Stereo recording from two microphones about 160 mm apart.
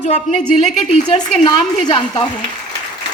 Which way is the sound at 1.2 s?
25° left (ahead or behind).